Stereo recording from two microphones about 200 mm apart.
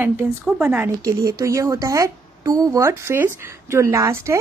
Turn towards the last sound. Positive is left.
turn(degrees=-15)  # may be behind; listen again after turning